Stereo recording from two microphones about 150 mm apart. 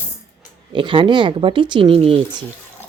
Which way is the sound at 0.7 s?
35° right (ahead or behind).